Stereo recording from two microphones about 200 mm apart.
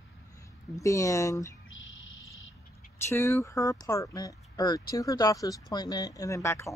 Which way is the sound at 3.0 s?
15° left (ahead or behind).